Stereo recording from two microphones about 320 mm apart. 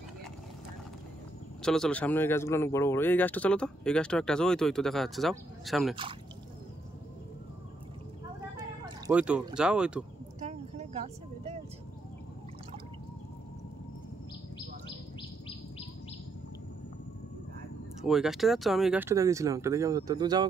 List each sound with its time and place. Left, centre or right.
1.6 s speech: centre
8.5 s speech: centre
10.4 s a sound: right
18.0 s speech: centre